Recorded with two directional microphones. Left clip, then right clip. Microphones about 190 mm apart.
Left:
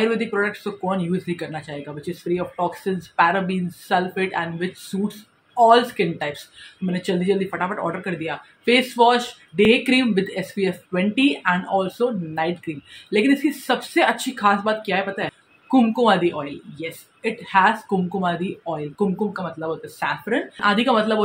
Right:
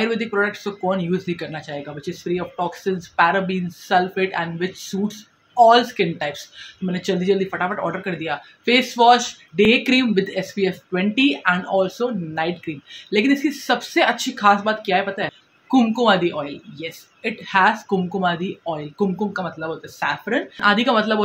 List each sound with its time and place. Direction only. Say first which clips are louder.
0.0 s a woman's voice: even; 5° right (ahead or behind)